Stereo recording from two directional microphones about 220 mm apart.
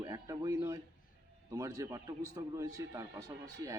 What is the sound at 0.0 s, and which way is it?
A man's voice, 15° right (ahead or behind).